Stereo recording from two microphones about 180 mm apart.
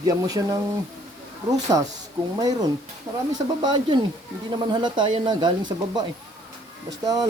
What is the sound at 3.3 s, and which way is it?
Speech, 25° right (ahead or behind).